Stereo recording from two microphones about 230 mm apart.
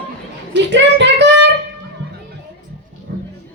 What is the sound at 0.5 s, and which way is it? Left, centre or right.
Music, right.